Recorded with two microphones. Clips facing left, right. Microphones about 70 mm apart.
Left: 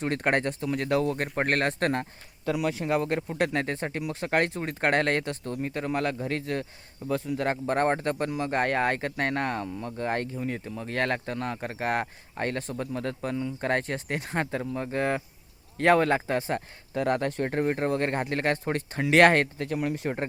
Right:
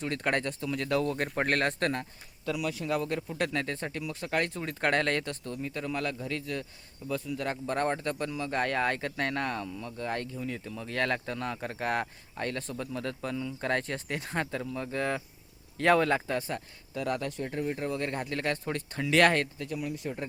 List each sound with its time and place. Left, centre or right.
0.0 s speech: left
1.1 s speech: centre
1.9 s speech: left
3.3 s speech: left
4.5 s speech: left
4.9 s speech: left
5.2 s speech: left
5.6 s speech: left
11.3 s speech: centre
12.3 s speech: left
13.0 s speech: left
13.3 s speech: left
19.2 s speech: left